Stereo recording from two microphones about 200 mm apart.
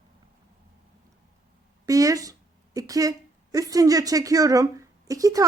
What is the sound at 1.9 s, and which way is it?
A woman's voice, 15° right (ahead or behind).